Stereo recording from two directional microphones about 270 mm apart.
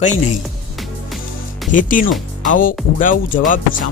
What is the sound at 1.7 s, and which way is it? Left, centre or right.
Speech, left.